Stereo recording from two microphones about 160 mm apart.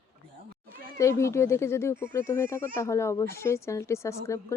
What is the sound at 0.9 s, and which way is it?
Speech, 20° left (ahead or behind).